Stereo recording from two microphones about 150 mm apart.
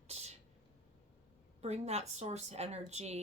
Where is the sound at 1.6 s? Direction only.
45° right (ahead or behind).